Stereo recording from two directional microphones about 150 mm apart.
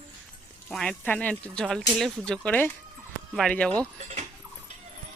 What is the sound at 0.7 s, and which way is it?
Speech, 5° left (ahead or behind).